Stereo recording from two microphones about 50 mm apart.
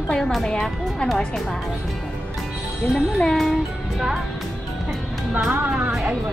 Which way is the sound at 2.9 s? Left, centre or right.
Centre.